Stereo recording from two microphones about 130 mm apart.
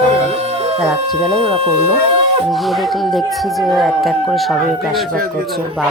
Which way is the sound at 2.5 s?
Centre (ahead or behind).